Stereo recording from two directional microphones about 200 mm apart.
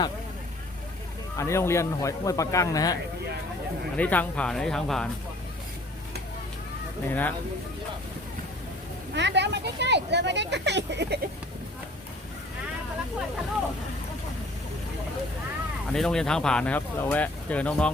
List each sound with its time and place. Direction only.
1.4 s a man's voice: 15° left (ahead or behind)
3.9 s speech: 5° left (ahead or behind)
7.1 s a man's voice: 10° left (ahead or behind)
9.1 s speech: 60° right (ahead or behind)
15.9 s speech: 5° left (ahead or behind)